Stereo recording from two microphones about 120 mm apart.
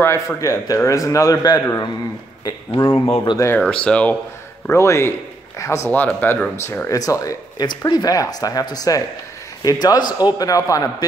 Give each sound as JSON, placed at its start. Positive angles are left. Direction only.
{"t": 0.0, "sound": "a man's voice", "side_deg": 25}
{"t": 2.7, "sound": "speech", "side_deg": 50}
{"t": 3.3, "sound": "a man's voice", "side_deg": 20}
{"t": 3.6, "sound": "speech", "side_deg": 10}
{"t": 4.6, "sound": "a man's voice", "side_deg": 25}
{"t": 6.2, "sound": "speech", "side_deg": 15}
{"t": 6.9, "sound": "speech", "side_deg": 30}